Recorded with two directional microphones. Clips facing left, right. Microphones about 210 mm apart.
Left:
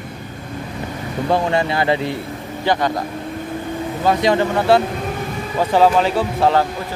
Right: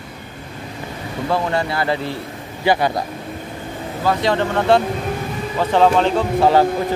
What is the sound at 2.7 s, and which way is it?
Speech, 10° right (ahead or behind).